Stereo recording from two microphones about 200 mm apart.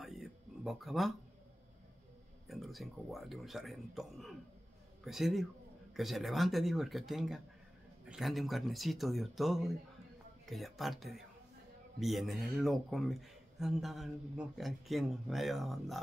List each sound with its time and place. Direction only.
0.0 s music: centre (ahead or behind)
2.4 s speech: centre (ahead or behind)